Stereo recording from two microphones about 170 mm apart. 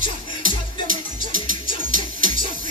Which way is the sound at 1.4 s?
50° right (ahead or behind).